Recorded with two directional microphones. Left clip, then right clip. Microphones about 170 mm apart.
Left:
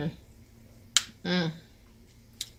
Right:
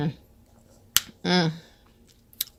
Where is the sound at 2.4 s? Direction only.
90° right.